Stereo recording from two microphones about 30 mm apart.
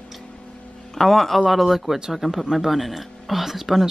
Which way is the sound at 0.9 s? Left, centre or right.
Centre.